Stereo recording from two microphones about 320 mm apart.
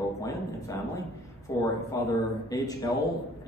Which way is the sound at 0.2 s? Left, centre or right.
Centre.